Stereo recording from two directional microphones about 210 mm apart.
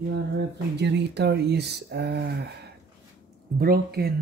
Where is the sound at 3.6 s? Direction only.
45° right (ahead or behind).